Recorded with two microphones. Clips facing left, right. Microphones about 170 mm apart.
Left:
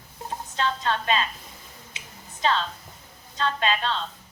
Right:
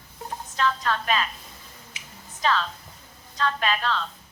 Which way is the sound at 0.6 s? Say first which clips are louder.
Right 1 dB; 25° left (ahead or behind).